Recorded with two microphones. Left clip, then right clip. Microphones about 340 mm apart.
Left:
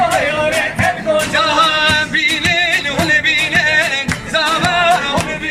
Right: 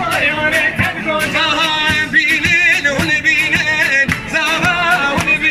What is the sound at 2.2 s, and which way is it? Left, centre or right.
Music, left.